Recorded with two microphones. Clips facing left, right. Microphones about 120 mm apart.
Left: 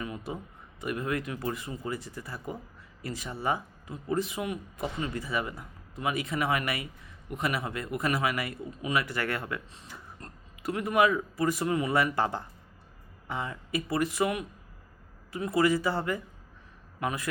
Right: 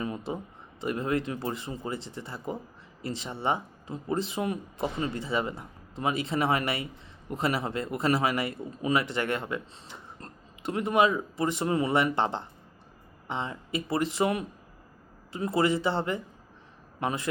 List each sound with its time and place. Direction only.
0.0 s a man's voice: 30° right (ahead or behind)